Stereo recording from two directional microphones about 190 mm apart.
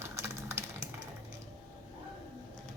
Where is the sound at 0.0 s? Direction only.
15° right (ahead or behind).